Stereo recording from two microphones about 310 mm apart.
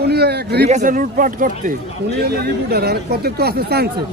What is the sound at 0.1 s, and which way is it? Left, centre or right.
Speech, right.